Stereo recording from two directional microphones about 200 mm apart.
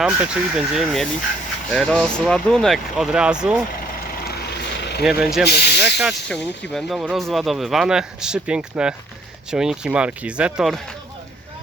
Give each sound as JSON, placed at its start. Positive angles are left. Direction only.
{"t": 0.0, "sound": "speech", "side_deg": -5}
{"t": 4.2, "sound": "vehicle", "side_deg": 50}
{"t": 5.0, "sound": "speech", "side_deg": 0}
{"t": 5.5, "sound": "speech", "side_deg": 55}
{"t": 6.0, "sound": "speech", "side_deg": 0}